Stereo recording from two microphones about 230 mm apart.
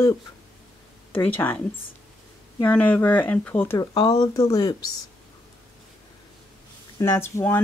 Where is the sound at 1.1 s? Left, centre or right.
Centre.